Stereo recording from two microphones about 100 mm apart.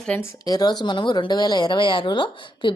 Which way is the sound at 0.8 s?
50° left (ahead or behind).